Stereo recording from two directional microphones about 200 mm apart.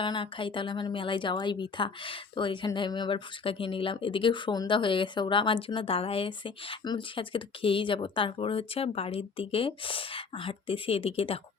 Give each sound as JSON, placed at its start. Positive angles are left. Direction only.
{"t": 0.0, "sound": "speech", "side_deg": 25}